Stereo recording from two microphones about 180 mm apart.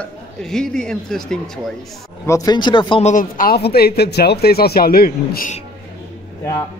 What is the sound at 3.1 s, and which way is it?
Speech, 50° left (ahead or behind).